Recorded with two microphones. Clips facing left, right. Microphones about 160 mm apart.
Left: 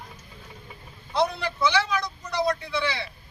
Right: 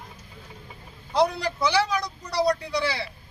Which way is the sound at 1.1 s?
35° right (ahead or behind).